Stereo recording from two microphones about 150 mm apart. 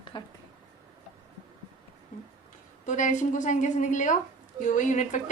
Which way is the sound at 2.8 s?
55° left (ahead or behind).